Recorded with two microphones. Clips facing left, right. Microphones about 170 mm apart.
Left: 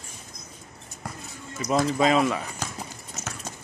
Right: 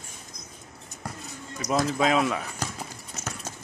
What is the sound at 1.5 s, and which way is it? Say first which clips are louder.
Speech: left 2 dB; centre (ahead or behind).